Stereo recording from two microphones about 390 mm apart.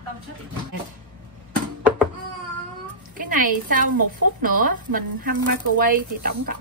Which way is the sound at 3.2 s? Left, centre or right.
Right.